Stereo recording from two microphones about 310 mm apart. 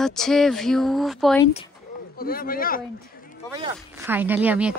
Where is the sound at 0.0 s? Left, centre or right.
Centre.